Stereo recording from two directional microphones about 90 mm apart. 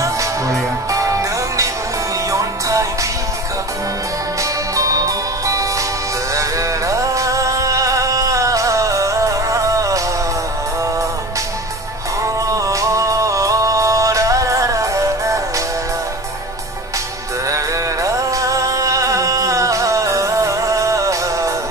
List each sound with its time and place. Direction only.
0.0 s music: 35° right (ahead or behind)
4.4 s music: 40° right (ahead or behind)
12.2 s music: 35° right (ahead or behind)
17.5 s music: 35° right (ahead or behind)